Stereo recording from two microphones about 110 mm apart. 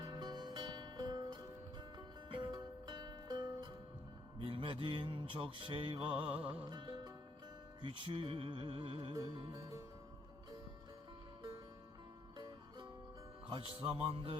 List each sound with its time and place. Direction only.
0.0 s music: 40° right (ahead or behind)
4.4 s mantra: 55° right (ahead or behind)
6.2 s music: 15° right (ahead or behind)
6.7 s music: 40° right (ahead or behind)
7.8 s speech: 50° right (ahead or behind)
9.1 s music: 40° right (ahead or behind)
13.5 s speech: 55° right (ahead or behind)